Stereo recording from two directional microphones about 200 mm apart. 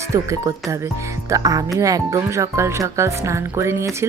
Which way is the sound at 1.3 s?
15° right (ahead or behind).